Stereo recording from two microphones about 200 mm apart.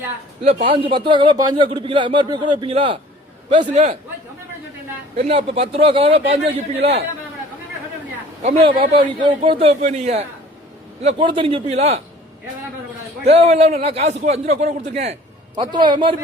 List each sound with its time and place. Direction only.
0.7 s a man's voice: 25° right (ahead or behind)
5.1 s a man's voice: 35° right (ahead or behind)
8.4 s a man's voice: 30° right (ahead or behind)
13.2 s a man's voice: 30° right (ahead or behind)